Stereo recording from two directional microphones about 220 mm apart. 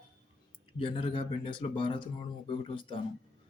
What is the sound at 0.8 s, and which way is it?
Speech, 25° left (ahead or behind).